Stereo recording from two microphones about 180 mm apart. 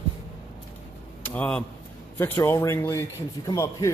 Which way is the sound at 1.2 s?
10° left (ahead or behind).